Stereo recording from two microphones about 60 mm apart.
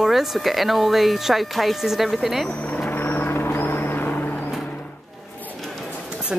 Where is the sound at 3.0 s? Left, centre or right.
Left.